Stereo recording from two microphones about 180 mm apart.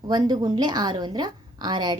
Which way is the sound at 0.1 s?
25° right (ahead or behind).